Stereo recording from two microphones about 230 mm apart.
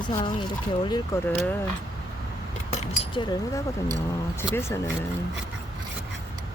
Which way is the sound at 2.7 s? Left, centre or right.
Left.